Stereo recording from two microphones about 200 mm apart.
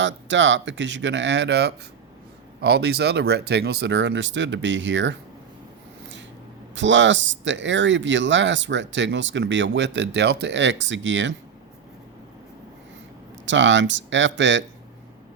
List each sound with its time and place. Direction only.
0.0 s speech: 65° right (ahead or behind)
6.7 s speech: 65° right (ahead or behind)
13.4 s speech: 65° right (ahead or behind)